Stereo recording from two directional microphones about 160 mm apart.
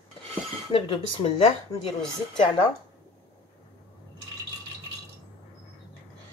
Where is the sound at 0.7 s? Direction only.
35° left (ahead or behind).